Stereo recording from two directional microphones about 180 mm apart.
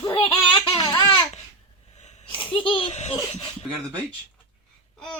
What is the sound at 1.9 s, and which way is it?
Sneeze, 40° left (ahead or behind).